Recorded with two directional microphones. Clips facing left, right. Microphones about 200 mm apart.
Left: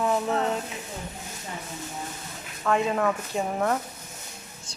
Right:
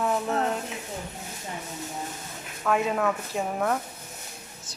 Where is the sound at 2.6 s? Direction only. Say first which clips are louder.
Left 1 dB; 5° right (ahead or behind).